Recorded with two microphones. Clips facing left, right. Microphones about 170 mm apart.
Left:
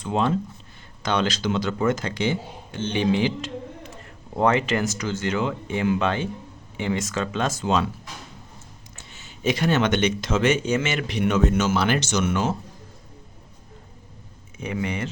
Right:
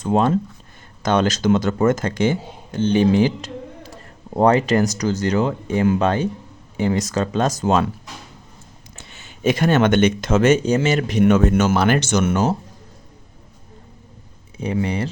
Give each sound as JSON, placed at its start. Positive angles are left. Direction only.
{"t": 0.0, "sound": "speech", "side_deg": -45}
{"t": 9.0, "sound": "speech", "side_deg": -60}
{"t": 14.6, "sound": "speech", "side_deg": -35}